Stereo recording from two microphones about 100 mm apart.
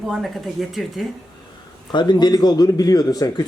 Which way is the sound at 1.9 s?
45° left (ahead or behind).